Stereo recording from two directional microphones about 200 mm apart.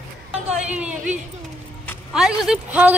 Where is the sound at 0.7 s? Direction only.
5° right (ahead or behind).